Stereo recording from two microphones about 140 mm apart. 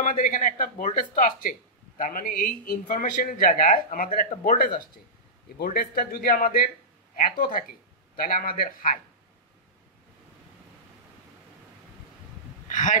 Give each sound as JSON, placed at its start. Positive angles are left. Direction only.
{"t": 0.0, "sound": "speech", "side_deg": 70}
{"t": 5.6, "sound": "a man's voice", "side_deg": 90}
{"t": 12.6, "sound": "a sound", "side_deg": 65}